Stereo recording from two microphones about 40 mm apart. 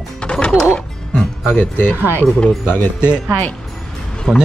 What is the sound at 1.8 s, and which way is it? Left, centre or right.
Speech, left.